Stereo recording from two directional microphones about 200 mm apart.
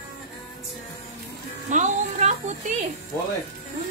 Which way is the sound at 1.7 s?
35° right (ahead or behind).